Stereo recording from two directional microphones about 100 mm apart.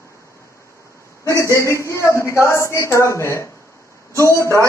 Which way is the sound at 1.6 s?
30° left (ahead or behind).